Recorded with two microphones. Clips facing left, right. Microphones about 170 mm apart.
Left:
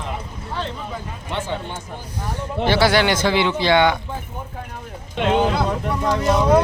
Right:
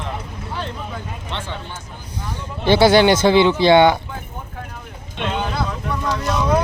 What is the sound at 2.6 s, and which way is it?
Speech, 20° right (ahead or behind).